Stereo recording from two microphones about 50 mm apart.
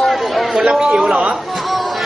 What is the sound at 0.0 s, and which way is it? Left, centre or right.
Chatter, centre.